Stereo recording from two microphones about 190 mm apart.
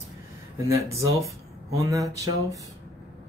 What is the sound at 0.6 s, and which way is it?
Speech, 15° right (ahead or behind).